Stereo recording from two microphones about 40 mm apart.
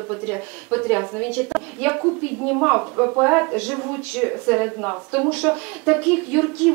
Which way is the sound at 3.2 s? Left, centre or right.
Right.